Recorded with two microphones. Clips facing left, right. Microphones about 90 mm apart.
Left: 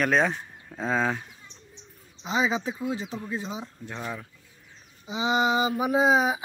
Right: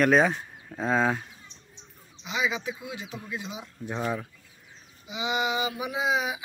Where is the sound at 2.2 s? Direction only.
35° left (ahead or behind).